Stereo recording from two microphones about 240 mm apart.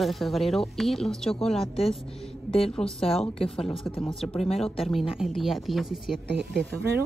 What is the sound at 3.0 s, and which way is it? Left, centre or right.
Speech, left.